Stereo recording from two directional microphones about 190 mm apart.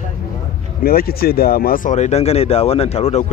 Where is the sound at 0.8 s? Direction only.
50° left (ahead or behind); by 3.3 s 35° left (ahead or behind).